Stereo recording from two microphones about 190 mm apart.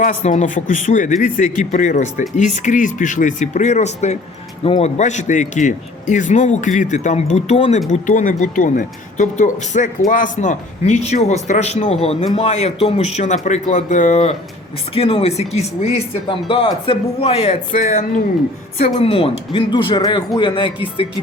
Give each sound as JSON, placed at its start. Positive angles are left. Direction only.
{"t": 0.0, "sound": "a man's voice", "side_deg": 40}
{"t": 18.9, "sound": "speech", "side_deg": 30}